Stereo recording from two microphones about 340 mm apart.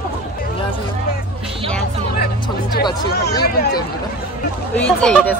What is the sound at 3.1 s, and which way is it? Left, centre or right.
Speech, left.